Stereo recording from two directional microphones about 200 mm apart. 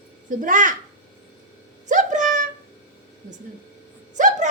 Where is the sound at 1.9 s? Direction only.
40° right (ahead or behind).